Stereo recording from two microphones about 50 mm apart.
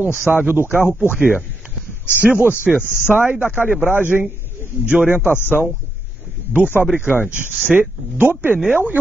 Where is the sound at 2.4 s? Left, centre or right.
Right.